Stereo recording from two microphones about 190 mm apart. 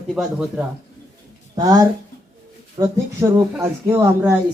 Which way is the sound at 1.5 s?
20° right (ahead or behind).